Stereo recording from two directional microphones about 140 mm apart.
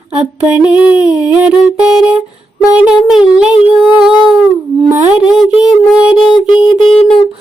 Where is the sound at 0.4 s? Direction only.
10° right (ahead or behind).